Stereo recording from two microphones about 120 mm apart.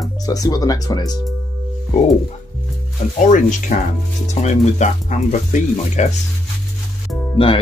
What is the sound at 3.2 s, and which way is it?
Speech, 90° left.